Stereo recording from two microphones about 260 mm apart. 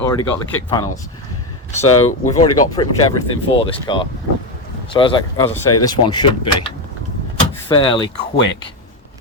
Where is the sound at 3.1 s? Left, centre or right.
Left.